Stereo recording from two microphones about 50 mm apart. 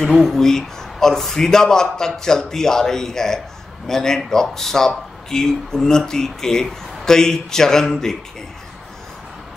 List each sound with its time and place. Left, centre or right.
0.1 s speech: centre